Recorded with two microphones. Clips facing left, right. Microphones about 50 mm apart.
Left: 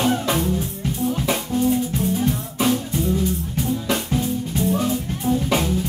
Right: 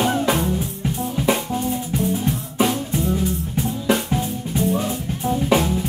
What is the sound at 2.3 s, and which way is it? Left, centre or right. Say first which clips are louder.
Music: even; right.